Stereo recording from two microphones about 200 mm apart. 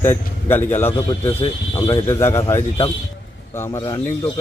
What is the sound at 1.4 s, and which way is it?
Speech, 25° left (ahead or behind).